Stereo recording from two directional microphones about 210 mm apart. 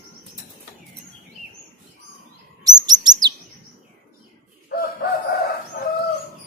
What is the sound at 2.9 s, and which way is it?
Chirp, 20° right (ahead or behind).